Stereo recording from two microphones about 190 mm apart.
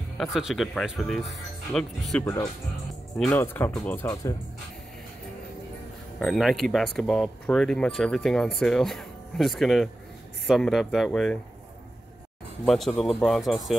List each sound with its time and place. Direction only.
0.2 s speech: centre (ahead or behind)
2.2 s speech: 15° left (ahead or behind)
3.2 s speech: 5° left (ahead or behind)
6.1 s speech: centre (ahead or behind)
12.6 s speech: centre (ahead or behind)